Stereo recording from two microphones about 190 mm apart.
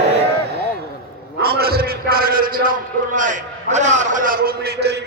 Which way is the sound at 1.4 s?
55° right (ahead or behind).